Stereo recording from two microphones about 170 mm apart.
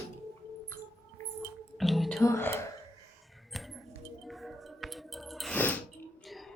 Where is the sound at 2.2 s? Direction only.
15° left (ahead or behind).